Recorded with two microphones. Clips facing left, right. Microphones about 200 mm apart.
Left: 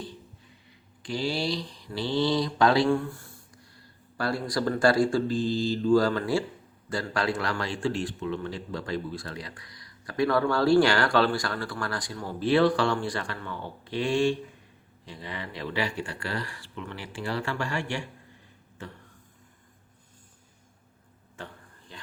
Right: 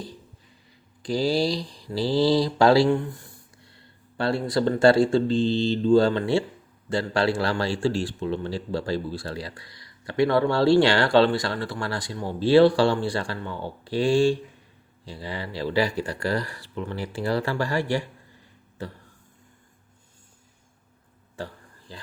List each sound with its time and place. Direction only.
1.0 s speech: 35° right (ahead or behind)
2.9 s a man's voice: 20° right (ahead or behind); by 18.9 s 35° right (ahead or behind)
21.3 s a sound: 35° right (ahead or behind)